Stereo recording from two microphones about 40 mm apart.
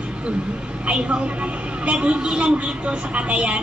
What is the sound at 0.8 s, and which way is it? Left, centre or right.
A woman's voice, right.